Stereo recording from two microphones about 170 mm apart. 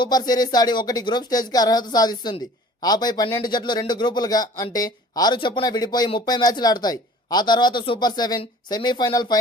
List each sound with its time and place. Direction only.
0.0 s a man's voice: 25° left (ahead or behind)